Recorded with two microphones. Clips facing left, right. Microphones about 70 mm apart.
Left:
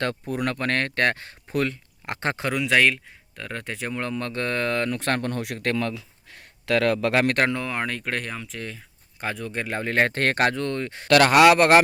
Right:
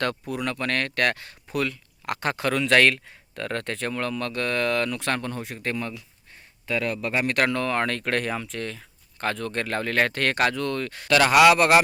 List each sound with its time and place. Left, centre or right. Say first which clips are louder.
0.3 s speech: left 2 dB; left
2.5 s speech: right 1 dB; centre; by 5.4 s left
5.4 s speech: left 4 dB; left
6.3 s speech: left 5 dB; left
7.5 s speech: right 3 dB; centre
11.1 s speech: left 2 dB; left